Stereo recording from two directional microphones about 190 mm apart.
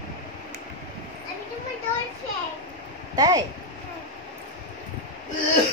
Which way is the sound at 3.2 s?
20° right (ahead or behind).